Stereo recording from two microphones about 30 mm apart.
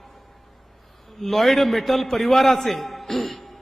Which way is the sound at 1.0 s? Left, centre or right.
Centre.